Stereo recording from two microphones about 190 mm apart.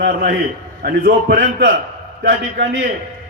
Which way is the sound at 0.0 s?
60° right (ahead or behind).